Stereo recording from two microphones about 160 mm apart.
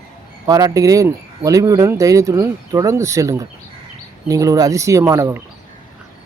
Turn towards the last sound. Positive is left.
turn(degrees=-20)  # may be behind; listen again after turning